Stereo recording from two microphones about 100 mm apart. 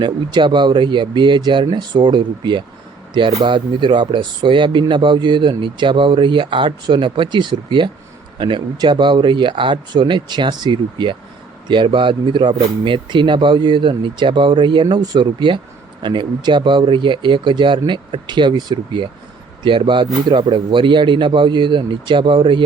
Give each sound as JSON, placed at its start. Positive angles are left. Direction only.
{"t": 0.0, "sound": "a man's voice", "side_deg": -50}